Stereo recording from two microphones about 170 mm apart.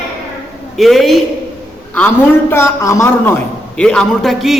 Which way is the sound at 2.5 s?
15° left (ahead or behind).